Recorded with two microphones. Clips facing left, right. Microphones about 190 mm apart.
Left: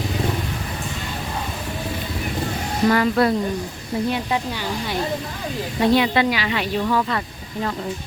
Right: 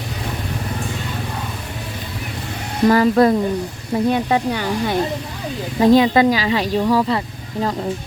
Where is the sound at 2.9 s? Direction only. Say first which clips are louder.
Right 6 dB; 40° right (ahead or behind).